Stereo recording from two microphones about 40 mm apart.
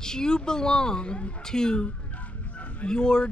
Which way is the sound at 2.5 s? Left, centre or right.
Left.